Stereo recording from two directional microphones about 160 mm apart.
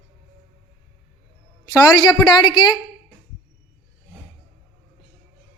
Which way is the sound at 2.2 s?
30° left (ahead or behind).